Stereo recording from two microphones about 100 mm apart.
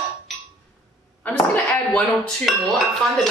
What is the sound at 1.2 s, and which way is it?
Speech, 15° left (ahead or behind).